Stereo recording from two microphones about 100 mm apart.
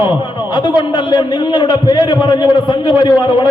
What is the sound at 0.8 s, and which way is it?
A man's voice, 50° left (ahead or behind).